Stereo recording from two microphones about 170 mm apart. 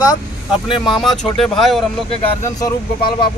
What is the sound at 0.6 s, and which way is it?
Speech, 30° left (ahead or behind).